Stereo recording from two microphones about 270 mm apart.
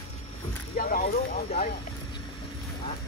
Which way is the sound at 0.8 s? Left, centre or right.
Left.